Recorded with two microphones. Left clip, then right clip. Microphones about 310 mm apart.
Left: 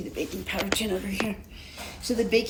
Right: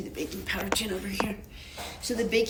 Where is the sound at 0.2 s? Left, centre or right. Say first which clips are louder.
Left 2 dB; centre.